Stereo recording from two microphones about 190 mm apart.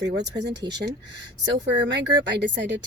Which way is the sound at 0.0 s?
65° right (ahead or behind).